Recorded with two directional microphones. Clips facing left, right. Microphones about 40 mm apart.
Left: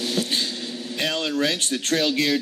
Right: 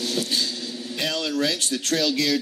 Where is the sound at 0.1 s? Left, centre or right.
Left.